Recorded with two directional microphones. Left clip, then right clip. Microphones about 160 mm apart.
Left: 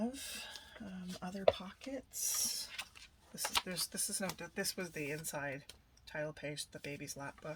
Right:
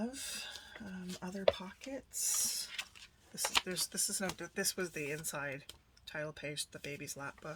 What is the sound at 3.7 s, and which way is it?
Speech, 30° right (ahead or behind).